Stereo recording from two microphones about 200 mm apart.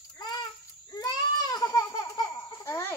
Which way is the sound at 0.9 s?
20° left (ahead or behind).